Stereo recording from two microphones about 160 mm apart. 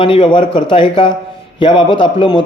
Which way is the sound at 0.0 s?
30° left (ahead or behind).